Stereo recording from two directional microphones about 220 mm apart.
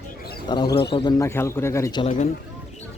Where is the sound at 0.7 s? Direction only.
50° left (ahead or behind).